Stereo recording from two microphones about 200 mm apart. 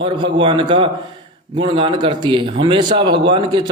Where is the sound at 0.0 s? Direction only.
25° right (ahead or behind).